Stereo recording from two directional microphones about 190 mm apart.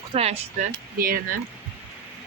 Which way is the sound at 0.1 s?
35° right (ahead or behind).